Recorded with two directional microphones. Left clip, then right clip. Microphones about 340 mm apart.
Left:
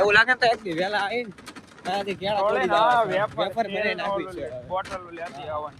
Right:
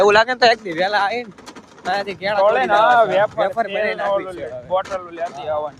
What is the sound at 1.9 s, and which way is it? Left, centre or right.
Speech, centre.